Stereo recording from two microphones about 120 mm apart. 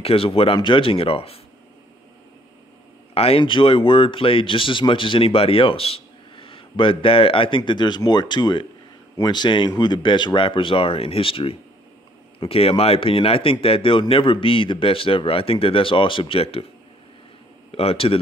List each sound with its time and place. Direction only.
0.0 s speech: 50° left (ahead or behind)
3.2 s speech: 50° left (ahead or behind)
17.6 s speech: 55° left (ahead or behind)